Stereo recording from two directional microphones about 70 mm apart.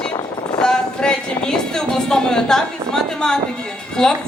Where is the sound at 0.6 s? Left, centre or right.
Centre.